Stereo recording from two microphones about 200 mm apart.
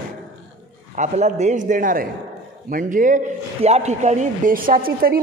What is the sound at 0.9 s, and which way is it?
Speech, 35° right (ahead or behind).